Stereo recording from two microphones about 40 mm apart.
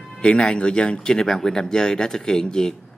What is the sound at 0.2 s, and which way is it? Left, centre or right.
Speech, left.